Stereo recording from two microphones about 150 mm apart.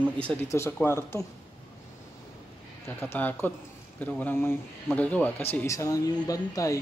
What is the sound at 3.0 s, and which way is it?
Speech, 15° left (ahead or behind).